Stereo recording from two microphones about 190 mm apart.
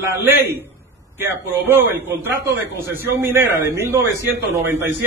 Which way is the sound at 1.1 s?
10° right (ahead or behind).